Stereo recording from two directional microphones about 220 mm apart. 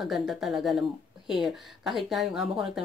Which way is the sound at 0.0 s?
Centre (ahead or behind).